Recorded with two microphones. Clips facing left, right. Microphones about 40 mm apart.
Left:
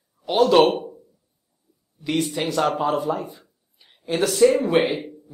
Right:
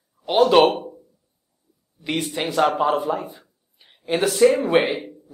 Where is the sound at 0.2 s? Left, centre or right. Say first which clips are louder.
Right 1 dB; centre.